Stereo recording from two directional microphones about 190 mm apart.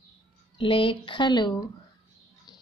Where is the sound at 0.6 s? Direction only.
25° left (ahead or behind).